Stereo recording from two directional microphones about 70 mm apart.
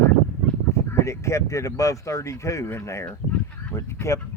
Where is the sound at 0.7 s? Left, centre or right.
Left.